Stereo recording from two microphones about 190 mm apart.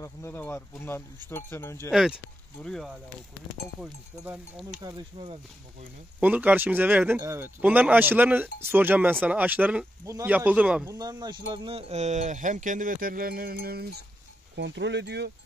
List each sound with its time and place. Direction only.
0.0 s speech: 15° left (ahead or behind)
1.9 s speech: centre (ahead or behind)
4.8 s speech: 25° right (ahead or behind)
6.1 s speech: 10° right (ahead or behind)
10.9 s speech: 20° right (ahead or behind); by 14.0 s 55° right (ahead or behind)
14.5 s speech: 65° right (ahead or behind)